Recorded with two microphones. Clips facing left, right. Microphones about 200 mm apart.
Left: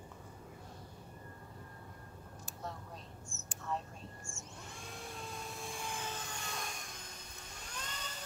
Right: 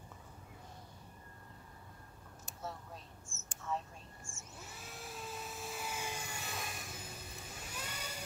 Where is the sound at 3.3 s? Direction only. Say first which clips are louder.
Left 4 dB; 15° left (ahead or behind).